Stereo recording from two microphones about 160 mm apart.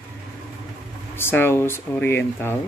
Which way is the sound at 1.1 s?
15° left (ahead or behind).